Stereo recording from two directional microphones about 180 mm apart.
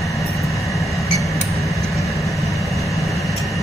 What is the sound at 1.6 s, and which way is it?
Vehicle, centre (ahead or behind).